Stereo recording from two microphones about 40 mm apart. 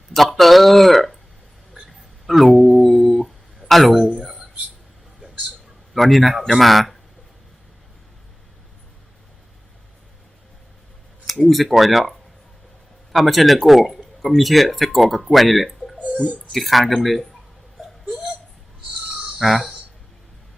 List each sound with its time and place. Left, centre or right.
0.1 s a sound: centre
3.7 s speech: centre
5.9 s speech: centre
11.3 s speech: centre
13.1 s speech: centre
16.0 s a sound: right
16.5 s speech: centre
17.8 s hiccup: centre
19.4 s speech: centre